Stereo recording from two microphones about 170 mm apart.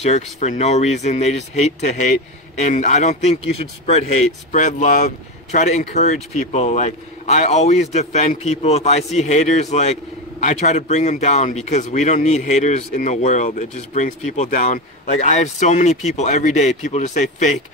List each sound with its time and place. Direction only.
0.0 s speech: 40° left (ahead or behind)